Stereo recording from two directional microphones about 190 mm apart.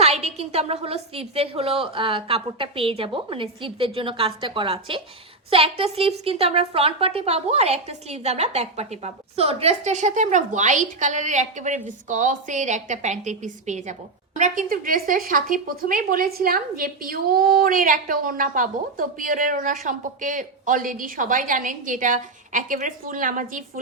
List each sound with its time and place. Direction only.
0.0 s a woman's voice: 35° right (ahead or behind)